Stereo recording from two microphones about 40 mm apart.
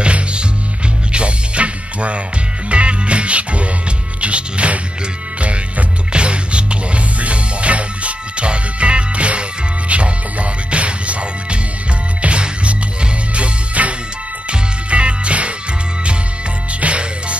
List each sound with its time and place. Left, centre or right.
0.0 s music: right
16.8 s music: right